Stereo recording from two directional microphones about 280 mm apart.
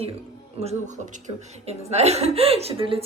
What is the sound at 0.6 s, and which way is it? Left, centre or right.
A woman's voice, right.